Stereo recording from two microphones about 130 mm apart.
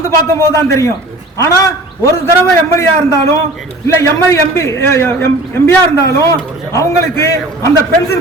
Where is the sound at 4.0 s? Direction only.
20° left (ahead or behind).